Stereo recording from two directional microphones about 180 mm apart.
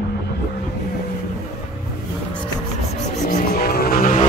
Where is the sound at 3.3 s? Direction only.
55° left (ahead or behind).